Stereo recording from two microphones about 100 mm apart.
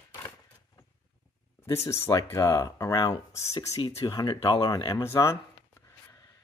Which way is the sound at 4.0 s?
45° left (ahead or behind).